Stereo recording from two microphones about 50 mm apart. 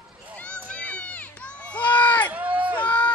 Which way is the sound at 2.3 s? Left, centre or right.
Right.